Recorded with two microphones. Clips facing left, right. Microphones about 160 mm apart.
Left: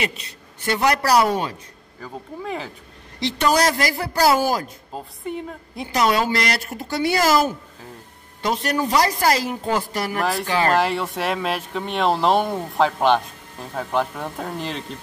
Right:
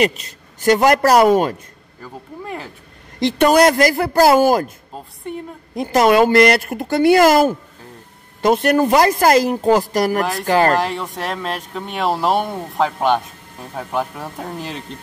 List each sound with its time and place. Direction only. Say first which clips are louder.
0.0 s speech: right 9 dB; 40° right (ahead or behind)
2.4 s speech: left 1 dB; centre (ahead or behind)
3.2 s speech: right 7 dB; 55° right (ahead or behind)
4.9 s speech: left 1 dB; 5° left (ahead or behind)
5.8 s speech: right 7 dB; 50° right (ahead or behind)
10.8 s speech: left 1 dB; centre (ahead or behind)